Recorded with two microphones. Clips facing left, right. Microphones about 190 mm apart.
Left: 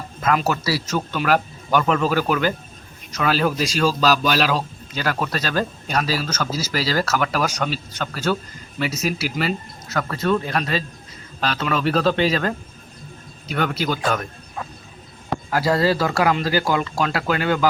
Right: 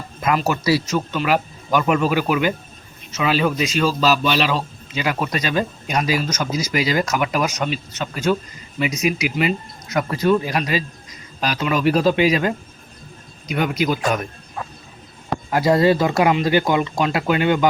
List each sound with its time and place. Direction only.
0.4 s speech: 10° right (ahead or behind)
4.9 s speech: 10° right (ahead or behind)
9.9 s speech: 15° right (ahead or behind)
15.4 s speech: 20° right (ahead or behind)